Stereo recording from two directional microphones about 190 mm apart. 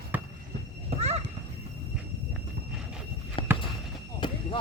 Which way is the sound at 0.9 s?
35° right (ahead or behind).